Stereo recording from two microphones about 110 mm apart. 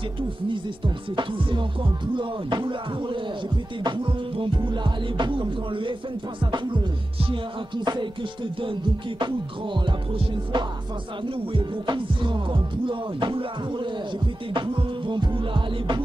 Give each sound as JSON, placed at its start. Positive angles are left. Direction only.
{"t": 0.5, "sound": "music", "side_deg": -50}
{"t": 9.8, "sound": "music", "side_deg": -45}